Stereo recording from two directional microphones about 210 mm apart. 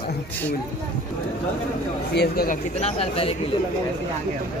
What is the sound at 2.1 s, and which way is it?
Speech, 45° left (ahead or behind).